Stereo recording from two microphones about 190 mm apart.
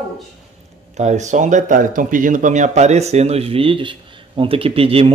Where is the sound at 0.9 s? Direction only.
35° right (ahead or behind).